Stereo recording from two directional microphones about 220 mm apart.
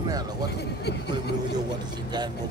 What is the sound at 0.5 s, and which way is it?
Speech, 50° left (ahead or behind).